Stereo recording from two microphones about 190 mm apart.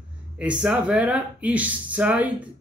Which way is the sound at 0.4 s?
5° right (ahead or behind).